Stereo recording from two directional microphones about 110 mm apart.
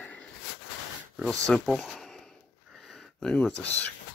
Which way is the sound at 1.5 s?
5° left (ahead or behind).